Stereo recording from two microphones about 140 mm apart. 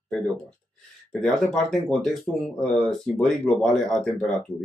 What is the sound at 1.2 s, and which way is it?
Speech, centre (ahead or behind).